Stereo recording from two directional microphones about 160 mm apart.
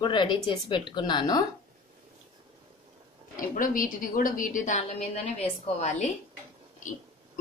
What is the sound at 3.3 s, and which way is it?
A woman's voice, 55° left (ahead or behind).